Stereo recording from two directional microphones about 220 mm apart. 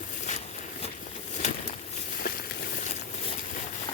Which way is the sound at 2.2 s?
45° left (ahead or behind).